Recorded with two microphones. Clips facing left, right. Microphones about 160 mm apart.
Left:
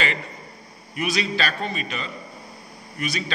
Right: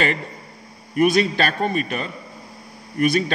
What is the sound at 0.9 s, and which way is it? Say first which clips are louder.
A man's voice: right 8 dB; 50° right (ahead or behind).